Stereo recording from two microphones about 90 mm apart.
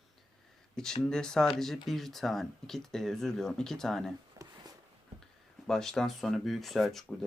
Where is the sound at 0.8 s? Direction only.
5° left (ahead or behind).